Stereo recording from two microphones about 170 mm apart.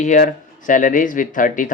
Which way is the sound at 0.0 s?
50° left (ahead or behind).